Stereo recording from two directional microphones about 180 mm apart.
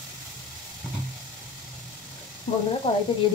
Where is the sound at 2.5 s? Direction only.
40° left (ahead or behind).